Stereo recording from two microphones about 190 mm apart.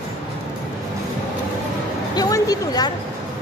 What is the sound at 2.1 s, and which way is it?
Speech, 20° left (ahead or behind).